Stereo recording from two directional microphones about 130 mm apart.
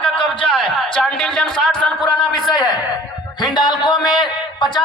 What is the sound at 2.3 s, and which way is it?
A man's voice, 35° left (ahead or behind).